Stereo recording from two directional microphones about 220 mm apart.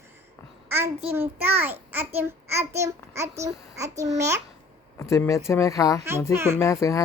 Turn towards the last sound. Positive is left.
turn(degrees=15)  # may be behind; listen again after turning